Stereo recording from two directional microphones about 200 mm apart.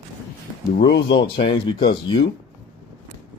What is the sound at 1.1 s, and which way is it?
Speech, 25° left (ahead or behind).